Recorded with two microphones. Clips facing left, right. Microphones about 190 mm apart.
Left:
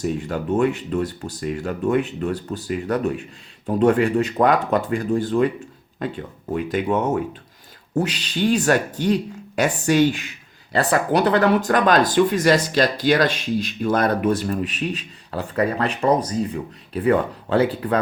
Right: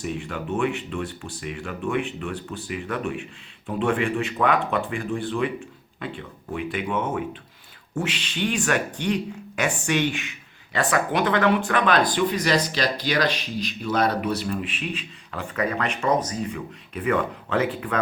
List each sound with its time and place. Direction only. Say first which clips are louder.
0.0 s speech: left 6 dB; 40° left (ahead or behind)